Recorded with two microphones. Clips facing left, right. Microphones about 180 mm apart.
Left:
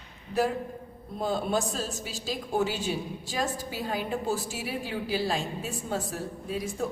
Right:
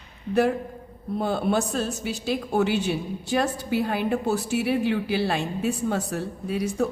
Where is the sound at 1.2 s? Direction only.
65° right (ahead or behind).